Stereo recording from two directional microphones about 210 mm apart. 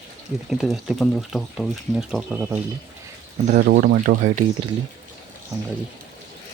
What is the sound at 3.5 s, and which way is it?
Speech, 40° right (ahead or behind).